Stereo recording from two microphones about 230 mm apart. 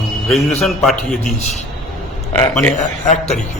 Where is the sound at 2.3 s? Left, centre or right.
Centre.